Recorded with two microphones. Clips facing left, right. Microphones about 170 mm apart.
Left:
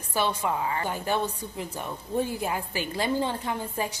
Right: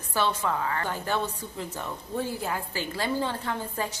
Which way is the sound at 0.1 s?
15° left (ahead or behind).